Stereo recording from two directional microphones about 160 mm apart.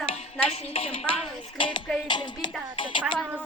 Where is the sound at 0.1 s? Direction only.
40° left (ahead or behind).